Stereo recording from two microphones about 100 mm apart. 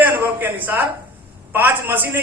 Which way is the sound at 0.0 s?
20° right (ahead or behind).